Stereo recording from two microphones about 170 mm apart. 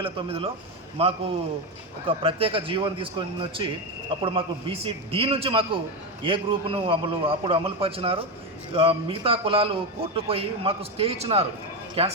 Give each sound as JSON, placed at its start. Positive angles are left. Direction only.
{"t": 0.0, "sound": "a man's voice", "side_deg": -35}